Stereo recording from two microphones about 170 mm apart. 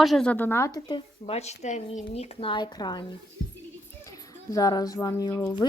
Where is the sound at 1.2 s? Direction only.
40° left (ahead or behind).